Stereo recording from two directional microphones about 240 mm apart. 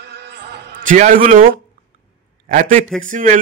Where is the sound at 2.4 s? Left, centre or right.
Right.